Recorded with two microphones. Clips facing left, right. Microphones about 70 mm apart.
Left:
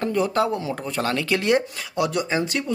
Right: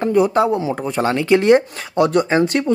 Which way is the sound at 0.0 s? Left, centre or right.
Centre.